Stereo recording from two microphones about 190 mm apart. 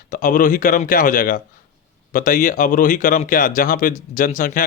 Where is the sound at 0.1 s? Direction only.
45° left (ahead or behind).